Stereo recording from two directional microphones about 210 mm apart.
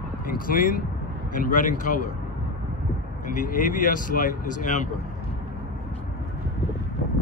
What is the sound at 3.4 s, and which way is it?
Speech, 40° left (ahead or behind).